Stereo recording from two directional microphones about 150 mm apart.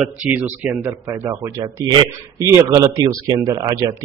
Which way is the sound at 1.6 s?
25° right (ahead or behind).